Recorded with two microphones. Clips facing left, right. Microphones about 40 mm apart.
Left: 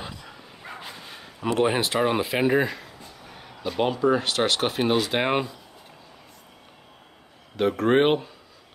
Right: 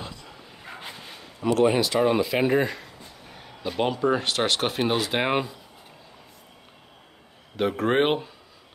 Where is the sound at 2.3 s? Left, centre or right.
Centre.